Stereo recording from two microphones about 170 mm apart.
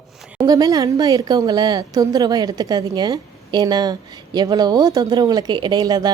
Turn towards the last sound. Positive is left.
turn(degrees=-20)  # may be behind; listen again after turning